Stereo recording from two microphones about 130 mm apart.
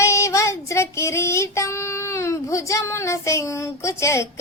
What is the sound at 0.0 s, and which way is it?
Child singing, 25° left (ahead or behind).